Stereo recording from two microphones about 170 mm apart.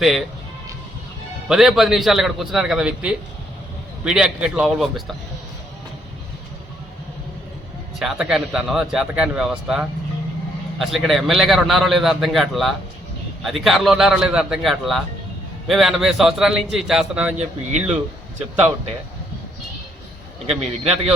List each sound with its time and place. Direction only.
0.0 s a man's voice: centre (ahead or behind)
1.5 s a man's voice: centre (ahead or behind)
7.9 s a man's voice: 5° right (ahead or behind)
20.5 s a man's voice: 35° right (ahead or behind)